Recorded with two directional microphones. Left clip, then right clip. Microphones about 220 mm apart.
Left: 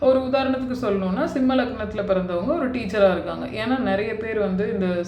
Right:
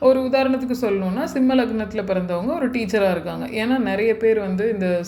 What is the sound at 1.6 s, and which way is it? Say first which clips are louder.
Speech: right 2 dB; 35° right (ahead or behind).